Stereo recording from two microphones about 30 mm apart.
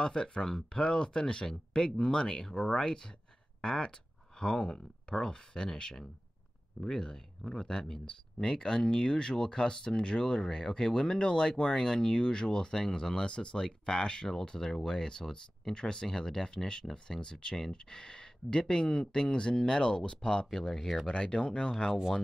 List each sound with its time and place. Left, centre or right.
0.0 s speech: left
8.4 s speech: left
13.7 s speech: left
20.5 s speech: centre
21.1 s speech: left